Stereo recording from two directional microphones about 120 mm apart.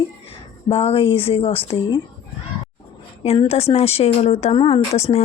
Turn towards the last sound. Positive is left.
turn(degrees=60)  # may be behind; listen again after turning